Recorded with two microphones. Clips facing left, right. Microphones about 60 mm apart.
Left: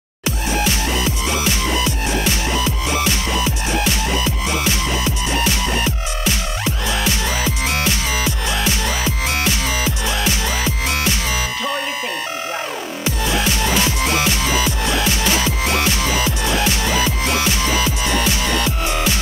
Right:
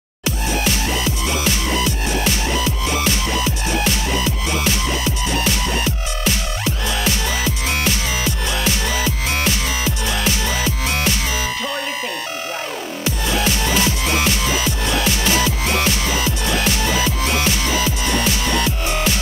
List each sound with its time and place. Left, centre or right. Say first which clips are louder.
1.9 s music: even; left
5.5 s music: left 1 dB; left
9.5 s music: left 1 dB; left
13.5 s music: even; left